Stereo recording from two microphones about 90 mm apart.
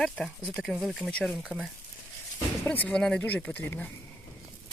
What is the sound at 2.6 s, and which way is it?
Speech, 20° left (ahead or behind).